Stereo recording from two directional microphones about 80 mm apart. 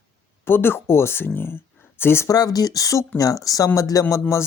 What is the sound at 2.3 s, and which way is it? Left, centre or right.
Speech, left.